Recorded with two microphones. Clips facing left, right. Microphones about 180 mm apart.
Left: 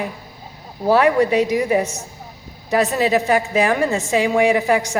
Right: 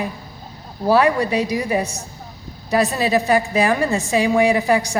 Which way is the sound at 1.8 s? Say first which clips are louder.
Left 2 dB; 15° right (ahead or behind).